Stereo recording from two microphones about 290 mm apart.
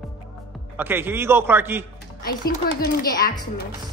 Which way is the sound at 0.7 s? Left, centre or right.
Centre.